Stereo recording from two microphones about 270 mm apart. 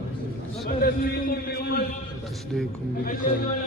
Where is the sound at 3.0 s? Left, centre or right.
Left.